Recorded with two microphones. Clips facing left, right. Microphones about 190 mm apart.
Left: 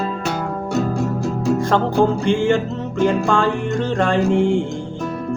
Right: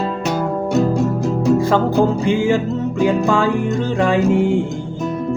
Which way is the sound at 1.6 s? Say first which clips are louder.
Right 2 dB; 5° right (ahead or behind).